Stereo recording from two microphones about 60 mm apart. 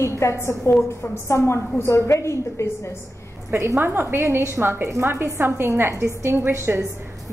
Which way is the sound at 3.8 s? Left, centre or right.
Right.